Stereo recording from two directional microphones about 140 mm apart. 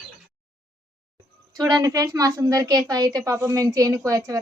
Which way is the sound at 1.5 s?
25° right (ahead or behind).